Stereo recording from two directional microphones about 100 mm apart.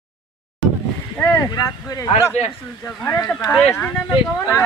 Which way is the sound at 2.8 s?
20° left (ahead or behind).